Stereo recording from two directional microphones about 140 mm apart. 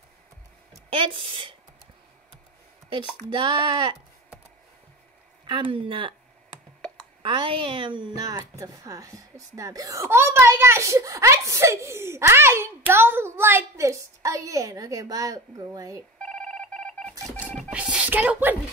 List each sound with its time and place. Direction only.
0.9 s speech: 40° right (ahead or behind)
2.9 s speech: 35° right (ahead or behind)
5.5 s speech: 40° right (ahead or behind)
7.2 s a woman's voice: 35° right (ahead or behind)
16.2 s telephone dialing: 5° left (ahead or behind)
17.6 s music: 10° right (ahead or behind)